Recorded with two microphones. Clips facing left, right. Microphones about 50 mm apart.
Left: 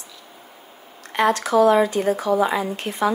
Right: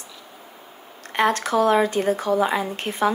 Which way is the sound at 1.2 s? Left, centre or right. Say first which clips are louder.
Left 2 dB; right.